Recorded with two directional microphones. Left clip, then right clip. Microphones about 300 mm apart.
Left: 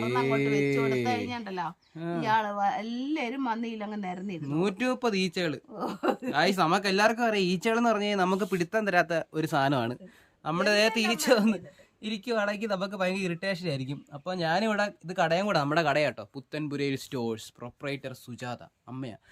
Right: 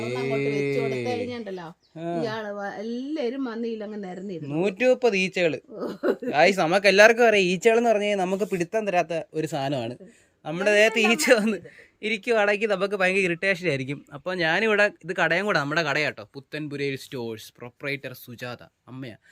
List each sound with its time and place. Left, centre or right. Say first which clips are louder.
0.0 s music: right 1 dB; centre
2.0 s a sound: right 5 dB; centre
2.2 s a woman's voice: left 4 dB; left
4.4 s speech: right 8 dB; centre